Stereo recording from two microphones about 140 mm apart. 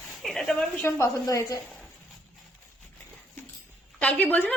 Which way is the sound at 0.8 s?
20° left (ahead or behind).